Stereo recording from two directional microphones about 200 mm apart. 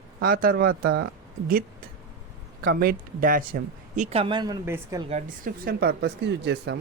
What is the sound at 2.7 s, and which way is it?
Speech, 45° right (ahead or behind).